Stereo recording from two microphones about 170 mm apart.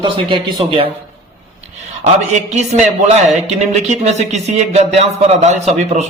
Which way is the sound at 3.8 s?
40° right (ahead or behind).